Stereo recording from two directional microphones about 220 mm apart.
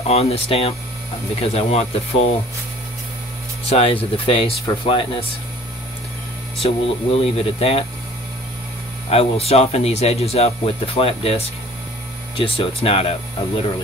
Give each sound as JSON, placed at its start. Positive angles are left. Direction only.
{"t": 0.0, "sound": "speech", "side_deg": 30}
{"t": 3.6, "sound": "speech", "side_deg": 25}
{"t": 6.6, "sound": "speech", "side_deg": 25}
{"t": 9.1, "sound": "speech", "side_deg": 25}